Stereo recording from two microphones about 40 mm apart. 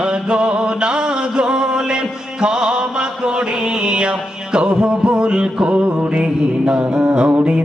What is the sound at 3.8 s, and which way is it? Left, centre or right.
Music, right.